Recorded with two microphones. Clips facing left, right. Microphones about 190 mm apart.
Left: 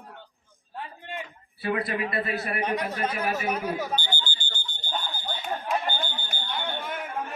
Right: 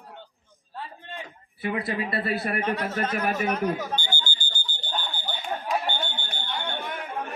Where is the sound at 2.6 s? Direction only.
15° left (ahead or behind).